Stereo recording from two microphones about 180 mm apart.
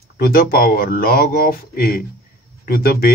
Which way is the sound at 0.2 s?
55° left (ahead or behind).